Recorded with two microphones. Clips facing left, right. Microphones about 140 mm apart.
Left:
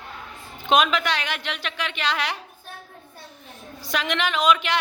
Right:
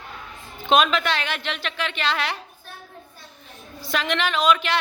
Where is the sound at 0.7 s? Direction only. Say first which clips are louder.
Right 1 dB; 15° left (ahead or behind).